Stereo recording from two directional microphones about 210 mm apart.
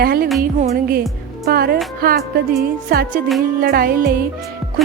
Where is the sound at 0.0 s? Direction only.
45° right (ahead or behind).